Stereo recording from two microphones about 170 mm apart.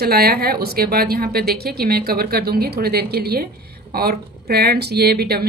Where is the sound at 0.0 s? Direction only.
65° right (ahead or behind).